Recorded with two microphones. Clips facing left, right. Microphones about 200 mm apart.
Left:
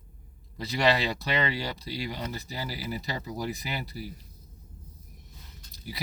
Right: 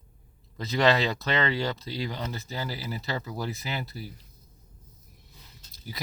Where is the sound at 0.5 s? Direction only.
15° left (ahead or behind).